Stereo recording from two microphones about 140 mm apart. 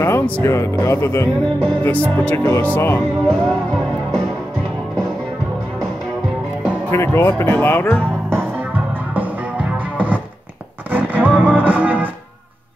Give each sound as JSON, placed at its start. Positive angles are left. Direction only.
{"t": 0.0, "sound": "speech", "side_deg": 20}
{"t": 6.9, "sound": "speech", "side_deg": 20}
{"t": 8.3, "sound": "music", "side_deg": -15}